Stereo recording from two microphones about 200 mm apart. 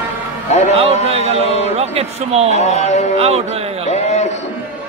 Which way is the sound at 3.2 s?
30° right (ahead or behind).